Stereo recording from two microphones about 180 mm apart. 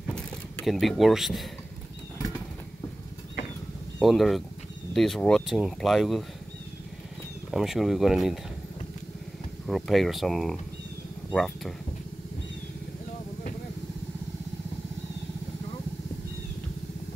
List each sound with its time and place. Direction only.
0.1 s vehicle: 5° left (ahead or behind)
2.1 s bird flight: 20° left (ahead or behind)
4.0 s speech: centre (ahead or behind)
7.5 s speech: centre (ahead or behind)
9.7 s speech: centre (ahead or behind)